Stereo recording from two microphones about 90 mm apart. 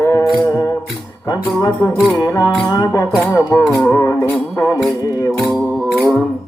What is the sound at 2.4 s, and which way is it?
Music, 40° left (ahead or behind).